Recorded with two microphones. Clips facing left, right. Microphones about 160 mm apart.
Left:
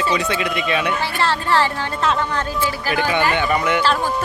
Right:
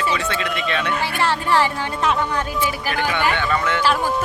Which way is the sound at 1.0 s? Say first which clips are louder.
Even; 15° right (ahead or behind).